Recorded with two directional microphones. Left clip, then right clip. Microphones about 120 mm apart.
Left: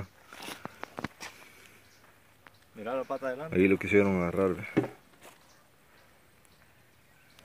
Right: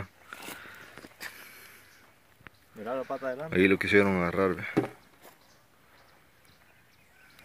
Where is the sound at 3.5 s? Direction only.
Centre (ahead or behind).